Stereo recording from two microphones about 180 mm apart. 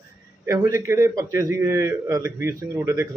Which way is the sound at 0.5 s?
15° right (ahead or behind).